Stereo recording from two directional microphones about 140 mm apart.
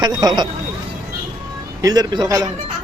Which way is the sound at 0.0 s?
30° right (ahead or behind).